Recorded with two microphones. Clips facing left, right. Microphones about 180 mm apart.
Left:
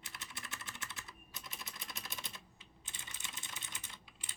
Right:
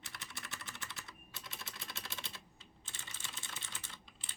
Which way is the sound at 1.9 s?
15° left (ahead or behind).